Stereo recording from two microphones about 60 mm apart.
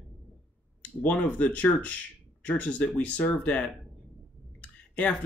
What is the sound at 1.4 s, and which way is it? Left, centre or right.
Speech, left.